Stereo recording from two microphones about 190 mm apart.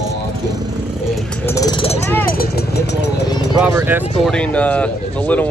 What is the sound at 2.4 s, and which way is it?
Speech, 60° left (ahead or behind).